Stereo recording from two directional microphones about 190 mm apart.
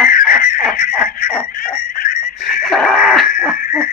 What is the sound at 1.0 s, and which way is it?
Dog, 50° left (ahead or behind).